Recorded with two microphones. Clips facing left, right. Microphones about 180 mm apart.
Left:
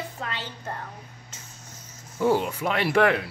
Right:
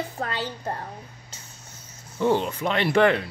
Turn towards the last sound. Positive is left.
turn(degrees=5)  # may be behind; listen again after turning